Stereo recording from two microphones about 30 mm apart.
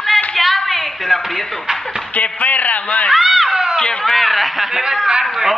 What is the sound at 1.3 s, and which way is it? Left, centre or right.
Speech, centre.